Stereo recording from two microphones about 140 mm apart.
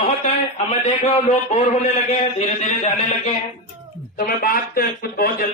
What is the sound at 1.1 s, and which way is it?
A man's voice, 50° left (ahead or behind).